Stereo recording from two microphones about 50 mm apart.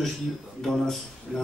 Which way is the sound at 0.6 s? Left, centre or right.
Centre.